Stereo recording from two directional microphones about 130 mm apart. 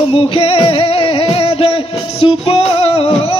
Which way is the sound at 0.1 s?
45° left (ahead or behind).